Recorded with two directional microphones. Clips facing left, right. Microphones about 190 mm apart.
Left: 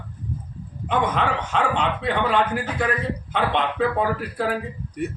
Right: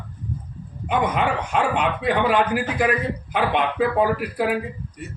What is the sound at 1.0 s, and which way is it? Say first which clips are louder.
A man's voice: right 2 dB; 10° right (ahead or behind).